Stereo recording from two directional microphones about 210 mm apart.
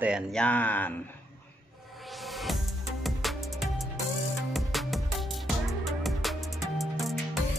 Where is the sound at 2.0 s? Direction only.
Centre (ahead or behind).